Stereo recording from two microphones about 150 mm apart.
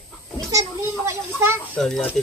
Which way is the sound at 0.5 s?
20° right (ahead or behind).